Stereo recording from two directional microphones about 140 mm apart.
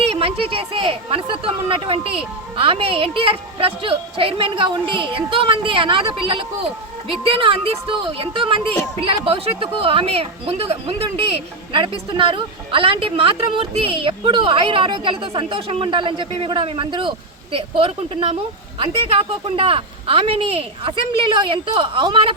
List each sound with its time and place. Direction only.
0.0 s speech: 40° right (ahead or behind)